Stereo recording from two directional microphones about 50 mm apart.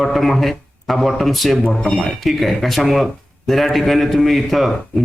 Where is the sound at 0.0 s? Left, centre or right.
Centre.